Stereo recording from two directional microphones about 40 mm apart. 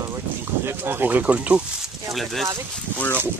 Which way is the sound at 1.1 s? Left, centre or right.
Right.